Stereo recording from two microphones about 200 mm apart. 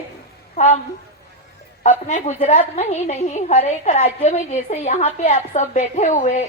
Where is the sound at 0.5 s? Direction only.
35° left (ahead or behind).